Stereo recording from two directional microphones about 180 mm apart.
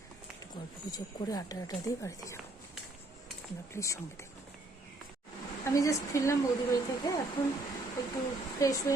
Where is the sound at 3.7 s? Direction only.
15° left (ahead or behind).